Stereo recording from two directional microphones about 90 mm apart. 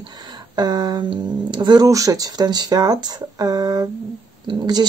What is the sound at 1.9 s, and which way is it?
Speech, 40° right (ahead or behind).